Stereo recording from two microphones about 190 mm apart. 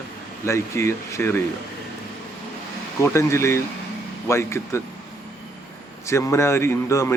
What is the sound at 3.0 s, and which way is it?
Speech, 15° left (ahead or behind).